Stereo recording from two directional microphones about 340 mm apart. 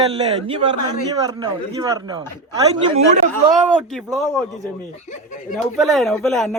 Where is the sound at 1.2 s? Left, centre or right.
Centre.